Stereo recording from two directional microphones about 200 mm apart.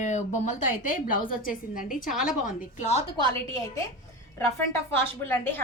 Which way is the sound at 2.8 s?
30° left (ahead or behind).